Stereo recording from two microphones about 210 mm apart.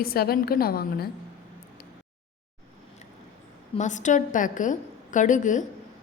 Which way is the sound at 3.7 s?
35° left (ahead or behind).